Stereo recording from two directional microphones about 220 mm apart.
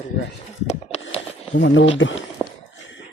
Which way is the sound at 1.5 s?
60° left (ahead or behind).